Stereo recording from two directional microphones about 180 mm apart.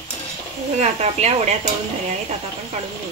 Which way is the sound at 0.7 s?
40° right (ahead or behind).